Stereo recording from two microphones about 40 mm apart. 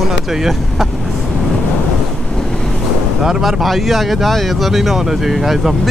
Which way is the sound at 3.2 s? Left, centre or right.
Centre.